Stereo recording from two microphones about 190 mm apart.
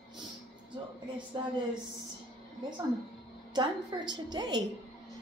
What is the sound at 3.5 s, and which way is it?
Speech, 20° right (ahead or behind).